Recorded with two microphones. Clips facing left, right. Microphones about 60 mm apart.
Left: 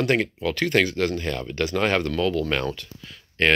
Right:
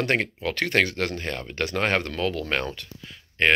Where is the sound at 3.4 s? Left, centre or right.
Centre.